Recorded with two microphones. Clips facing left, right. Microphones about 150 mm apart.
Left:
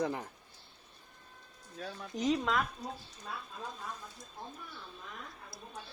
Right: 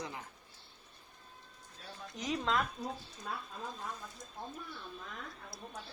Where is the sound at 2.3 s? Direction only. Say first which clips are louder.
Left 1 dB; 5° left (ahead or behind).